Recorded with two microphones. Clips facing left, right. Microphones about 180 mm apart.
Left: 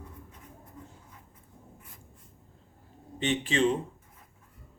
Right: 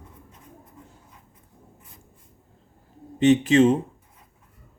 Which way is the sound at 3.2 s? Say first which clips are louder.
Right 10 dB; 45° right (ahead or behind).